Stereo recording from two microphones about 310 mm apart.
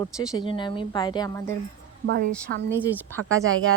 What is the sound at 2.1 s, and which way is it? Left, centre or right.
Speech, right.